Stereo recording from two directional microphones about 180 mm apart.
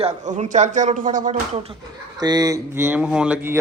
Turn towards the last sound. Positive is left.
turn(degrees=-5)  # may be behind; listen again after turning